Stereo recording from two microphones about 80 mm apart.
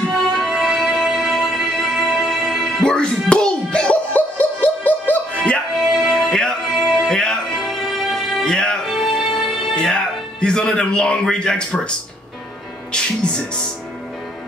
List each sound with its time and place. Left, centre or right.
0.3 s music: centre
2.8 s music: centre
5.9 s music: centre
12.9 s music: centre